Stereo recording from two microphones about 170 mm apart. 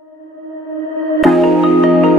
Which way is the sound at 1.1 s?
Centre (ahead or behind).